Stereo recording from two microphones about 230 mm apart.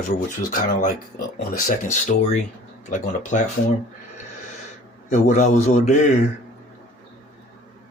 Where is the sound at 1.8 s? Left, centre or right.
Left.